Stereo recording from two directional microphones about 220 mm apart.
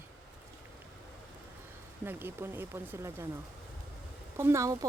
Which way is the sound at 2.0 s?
10° right (ahead or behind).